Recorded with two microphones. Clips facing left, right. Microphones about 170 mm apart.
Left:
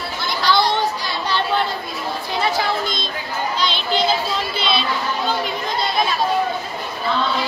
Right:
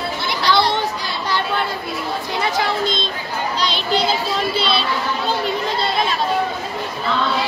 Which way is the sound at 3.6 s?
35° right (ahead or behind).